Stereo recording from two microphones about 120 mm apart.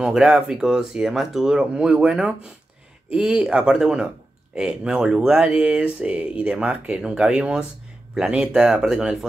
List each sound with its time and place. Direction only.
0.0 s speech: 5° right (ahead or behind)